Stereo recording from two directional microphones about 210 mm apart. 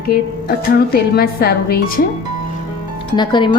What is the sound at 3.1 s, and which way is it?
Speech, 20° left (ahead or behind).